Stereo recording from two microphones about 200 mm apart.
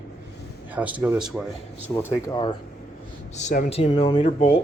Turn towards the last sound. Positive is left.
turn(degrees=35)  # may be behind; listen again after turning